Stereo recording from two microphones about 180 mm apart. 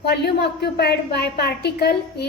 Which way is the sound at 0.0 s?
65° left (ahead or behind).